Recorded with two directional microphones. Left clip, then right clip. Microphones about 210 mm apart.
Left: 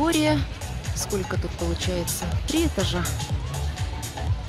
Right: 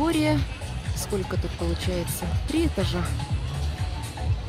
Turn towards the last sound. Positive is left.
turn(degrees=0)  # may be behind; listen again after turning